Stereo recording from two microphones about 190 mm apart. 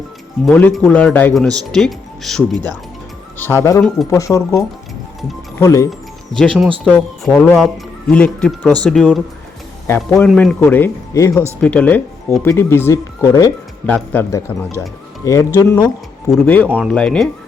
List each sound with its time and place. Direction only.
0.4 s speech: 5° left (ahead or behind)
3.3 s speech: 10° left (ahead or behind)
6.4 s speech: centre (ahead or behind); by 15.9 s 20° left (ahead or behind)
16.6 s speech: 10° right (ahead or behind)
16.9 s speech: 5° left (ahead or behind)